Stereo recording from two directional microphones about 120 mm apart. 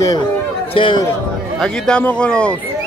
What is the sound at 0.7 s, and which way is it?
Speech, 45° left (ahead or behind).